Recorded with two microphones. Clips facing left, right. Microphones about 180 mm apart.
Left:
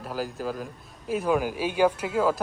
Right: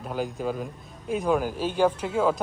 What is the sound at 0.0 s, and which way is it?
A man's voice, 5° left (ahead or behind).